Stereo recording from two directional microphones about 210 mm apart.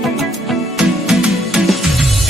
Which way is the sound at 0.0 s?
Centre (ahead or behind).